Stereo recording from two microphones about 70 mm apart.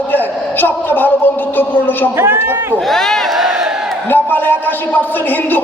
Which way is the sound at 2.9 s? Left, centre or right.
Centre.